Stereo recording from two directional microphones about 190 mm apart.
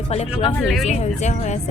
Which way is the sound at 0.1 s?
35° left (ahead or behind).